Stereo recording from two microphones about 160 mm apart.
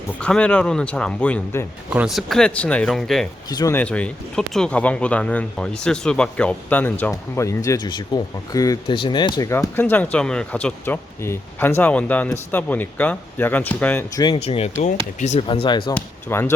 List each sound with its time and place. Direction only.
0.2 s speech: 5° left (ahead or behind)
1.9 s speech: 5° right (ahead or behind)
3.5 s speech: 20° left (ahead or behind)
3.8 s speech: 10° left (ahead or behind)
14.4 s speech: 40° left (ahead or behind)
16.0 s speech: 15° left (ahead or behind)